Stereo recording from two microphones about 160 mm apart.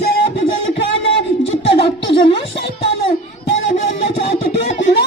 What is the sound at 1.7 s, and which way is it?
Music, 35° left (ahead or behind).